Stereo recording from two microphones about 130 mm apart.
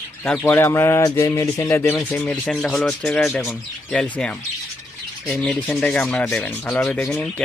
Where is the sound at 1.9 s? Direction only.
10° left (ahead or behind).